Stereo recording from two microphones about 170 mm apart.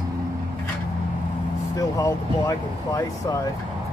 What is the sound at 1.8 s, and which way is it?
Speech, 20° left (ahead or behind).